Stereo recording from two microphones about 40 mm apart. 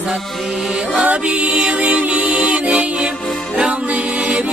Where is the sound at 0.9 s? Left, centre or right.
Right.